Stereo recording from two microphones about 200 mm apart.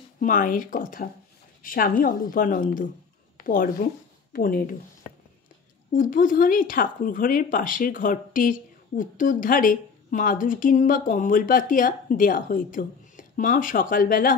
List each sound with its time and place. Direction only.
0.2 s a woman's voice: 40° left (ahead or behind)
5.9 s speech: 40° left (ahead or behind)